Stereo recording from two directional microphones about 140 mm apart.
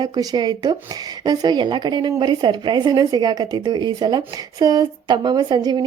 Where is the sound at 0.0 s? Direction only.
25° right (ahead or behind).